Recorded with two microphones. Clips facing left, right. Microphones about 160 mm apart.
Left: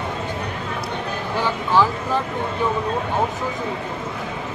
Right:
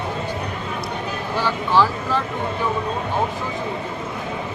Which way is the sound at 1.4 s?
15° left (ahead or behind).